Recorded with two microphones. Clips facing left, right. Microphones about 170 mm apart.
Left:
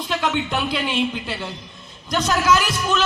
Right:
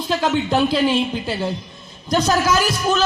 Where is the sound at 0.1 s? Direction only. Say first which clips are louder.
Right 5 dB; 35° right (ahead or behind).